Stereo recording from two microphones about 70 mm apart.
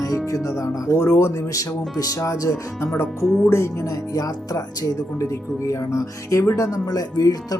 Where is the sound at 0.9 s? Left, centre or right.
Left.